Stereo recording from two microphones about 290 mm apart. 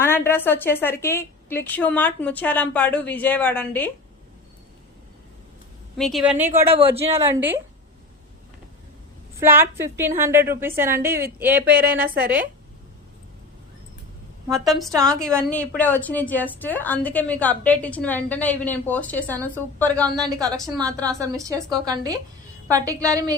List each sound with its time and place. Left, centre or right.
0.0 s a woman's voice: centre
6.0 s a woman's voice: centre
6.7 s speech: centre
7.1 s a woman's voice: centre
9.4 s a woman's voice: centre
14.4 s a woman's voice: centre
20.2 s a woman's voice: centre